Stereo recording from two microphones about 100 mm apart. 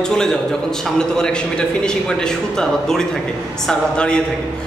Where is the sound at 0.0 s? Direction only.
5° left (ahead or behind).